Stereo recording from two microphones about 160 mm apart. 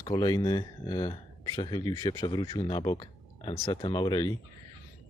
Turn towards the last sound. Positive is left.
turn(degrees=25)  # may be behind; listen again after turning